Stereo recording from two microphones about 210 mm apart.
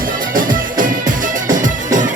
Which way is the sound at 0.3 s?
40° right (ahead or behind).